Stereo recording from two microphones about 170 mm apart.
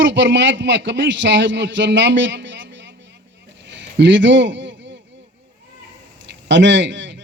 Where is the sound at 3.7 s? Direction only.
90° right.